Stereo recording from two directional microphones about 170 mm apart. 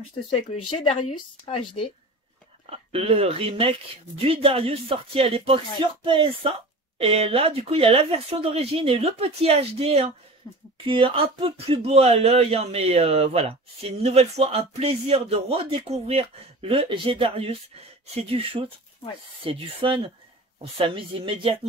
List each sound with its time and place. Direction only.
1.5 s speech: 30° left (ahead or behind)
2.6 s speech: 35° right (ahead or behind)
10.4 s speech: 25° left (ahead or behind)
10.9 s speech: 30° right (ahead or behind)